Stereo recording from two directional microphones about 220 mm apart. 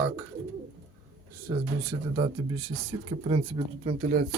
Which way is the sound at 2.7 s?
25° right (ahead or behind).